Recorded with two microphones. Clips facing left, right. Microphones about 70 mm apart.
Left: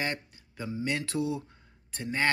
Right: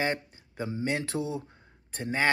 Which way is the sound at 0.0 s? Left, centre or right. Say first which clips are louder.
Right 4 dB; right.